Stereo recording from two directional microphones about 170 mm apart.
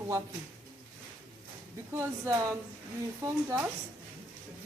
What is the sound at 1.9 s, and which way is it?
Speech, 15° right (ahead or behind).